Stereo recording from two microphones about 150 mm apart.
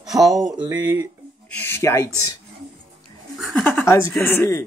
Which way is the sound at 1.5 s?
15° left (ahead or behind).